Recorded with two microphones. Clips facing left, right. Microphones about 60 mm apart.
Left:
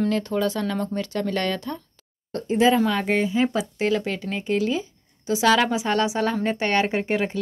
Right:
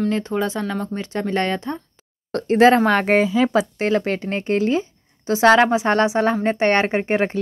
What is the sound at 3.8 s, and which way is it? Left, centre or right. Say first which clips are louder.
A woman's voice: right 3 dB; right.